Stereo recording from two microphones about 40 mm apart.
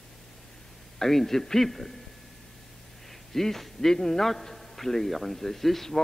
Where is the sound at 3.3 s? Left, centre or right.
Centre.